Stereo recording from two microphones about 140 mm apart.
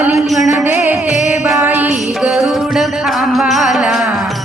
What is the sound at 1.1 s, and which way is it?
Music, 60° left (ahead or behind).